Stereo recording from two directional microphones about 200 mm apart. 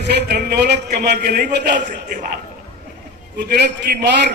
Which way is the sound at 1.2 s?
40° right (ahead or behind).